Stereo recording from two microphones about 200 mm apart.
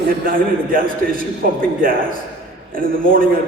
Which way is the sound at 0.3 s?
45° right (ahead or behind).